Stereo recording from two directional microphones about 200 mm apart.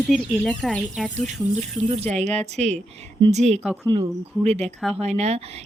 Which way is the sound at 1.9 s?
35° right (ahead or behind).